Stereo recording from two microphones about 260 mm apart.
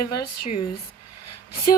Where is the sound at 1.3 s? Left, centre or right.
Left.